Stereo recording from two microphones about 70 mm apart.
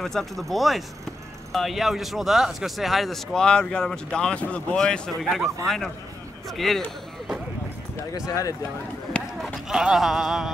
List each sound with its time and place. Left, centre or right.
0.0 s speech: centre
5.2 s speech: centre
6.5 s speech: centre
8.3 s speech: left
9.4 s speech: centre